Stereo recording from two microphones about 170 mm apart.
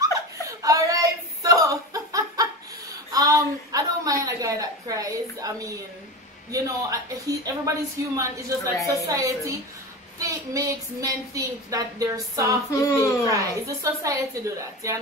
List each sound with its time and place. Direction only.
0.0 s a sound: 20° right (ahead or behind)
6.5 s a woman's voice: 20° right (ahead or behind)
12.7 s speech: 20° left (ahead or behind)
13.3 s a woman's voice: 20° right (ahead or behind)